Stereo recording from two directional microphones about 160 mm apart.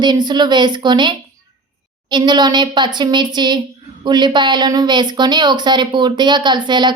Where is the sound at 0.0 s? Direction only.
25° right (ahead or behind).